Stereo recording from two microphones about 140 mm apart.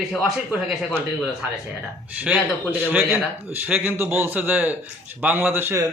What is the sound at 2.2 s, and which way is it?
Speech, 10° right (ahead or behind).